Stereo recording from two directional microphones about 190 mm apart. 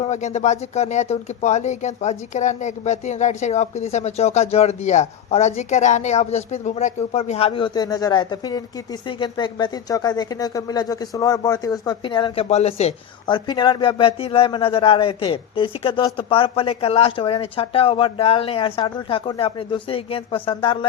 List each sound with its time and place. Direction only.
0.0 s speech: 35° left (ahead or behind)